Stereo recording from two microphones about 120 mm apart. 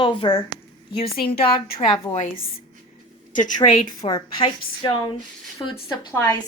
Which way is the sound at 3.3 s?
90° left.